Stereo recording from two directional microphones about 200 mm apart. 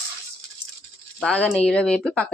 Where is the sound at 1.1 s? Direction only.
5° left (ahead or behind).